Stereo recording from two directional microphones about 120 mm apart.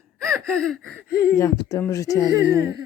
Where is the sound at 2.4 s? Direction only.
25° right (ahead or behind).